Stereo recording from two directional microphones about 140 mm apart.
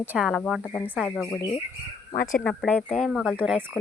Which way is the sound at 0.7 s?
15° left (ahead or behind).